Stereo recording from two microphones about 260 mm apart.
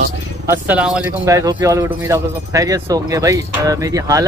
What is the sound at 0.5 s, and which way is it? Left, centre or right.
Speech, centre.